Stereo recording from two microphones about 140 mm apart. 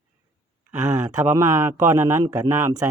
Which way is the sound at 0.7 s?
20° right (ahead or behind).